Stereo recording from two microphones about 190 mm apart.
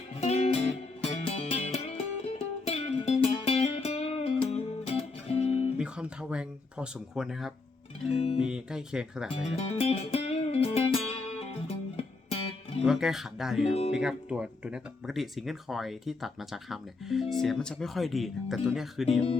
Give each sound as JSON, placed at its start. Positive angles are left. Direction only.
{"t": 0.2, "sound": "music", "side_deg": 35}
{"t": 5.7, "sound": "speech", "side_deg": -5}
{"t": 9.3, "sound": "music", "side_deg": 30}
{"t": 12.8, "sound": "speech", "side_deg": -5}